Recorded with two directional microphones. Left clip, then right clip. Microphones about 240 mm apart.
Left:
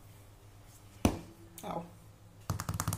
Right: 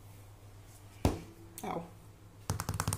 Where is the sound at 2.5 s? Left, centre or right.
Centre.